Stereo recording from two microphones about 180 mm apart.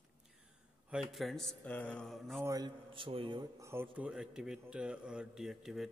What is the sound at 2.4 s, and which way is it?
A man's voice, 20° right (ahead or behind).